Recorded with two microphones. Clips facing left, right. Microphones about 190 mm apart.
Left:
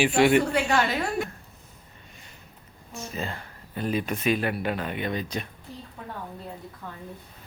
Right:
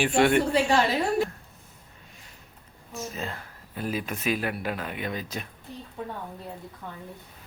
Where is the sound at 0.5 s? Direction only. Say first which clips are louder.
Right 2 dB; 30° right (ahead or behind).